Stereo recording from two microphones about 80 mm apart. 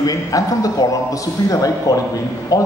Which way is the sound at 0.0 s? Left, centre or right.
Left.